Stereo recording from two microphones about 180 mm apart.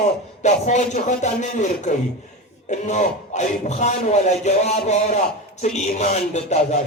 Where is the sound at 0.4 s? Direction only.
40° left (ahead or behind).